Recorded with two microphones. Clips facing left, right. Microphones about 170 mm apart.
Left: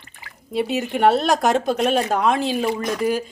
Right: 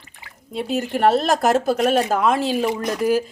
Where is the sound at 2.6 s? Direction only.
10° right (ahead or behind).